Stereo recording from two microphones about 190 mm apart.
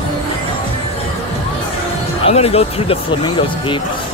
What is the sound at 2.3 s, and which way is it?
Music, 30° left (ahead or behind).